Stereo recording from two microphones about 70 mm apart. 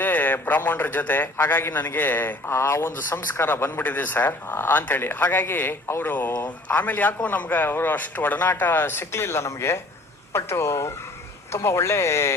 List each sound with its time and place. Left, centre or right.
0.0 s a man's voice: left